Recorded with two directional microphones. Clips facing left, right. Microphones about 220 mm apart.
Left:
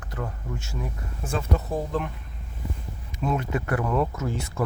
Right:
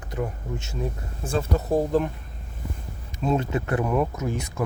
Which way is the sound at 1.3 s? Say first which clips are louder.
Right 4 dB; 35° right (ahead or behind).